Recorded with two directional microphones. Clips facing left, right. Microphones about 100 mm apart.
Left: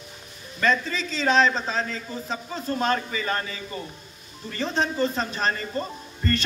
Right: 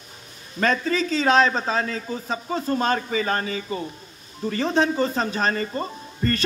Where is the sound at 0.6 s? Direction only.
45° right (ahead or behind).